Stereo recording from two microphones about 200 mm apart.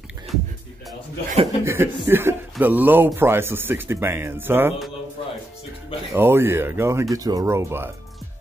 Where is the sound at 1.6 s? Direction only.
10° right (ahead or behind).